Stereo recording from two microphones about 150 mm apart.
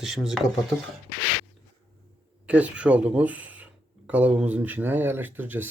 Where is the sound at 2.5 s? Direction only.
10° right (ahead or behind).